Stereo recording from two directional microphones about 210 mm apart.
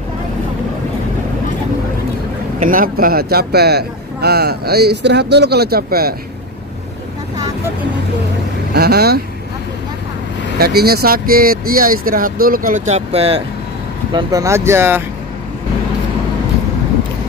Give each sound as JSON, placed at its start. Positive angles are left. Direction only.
{"t": 2.6, "sound": "speech", "side_deg": -40}
{"t": 8.7, "sound": "speech", "side_deg": -50}
{"t": 10.6, "sound": "speech", "side_deg": -45}
{"t": 14.1, "sound": "speech", "side_deg": -15}